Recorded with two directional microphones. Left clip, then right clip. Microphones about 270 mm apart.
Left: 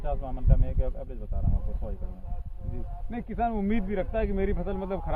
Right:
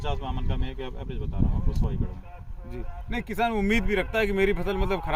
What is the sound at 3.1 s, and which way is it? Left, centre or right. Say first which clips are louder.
Speech: right 3 dB; centre.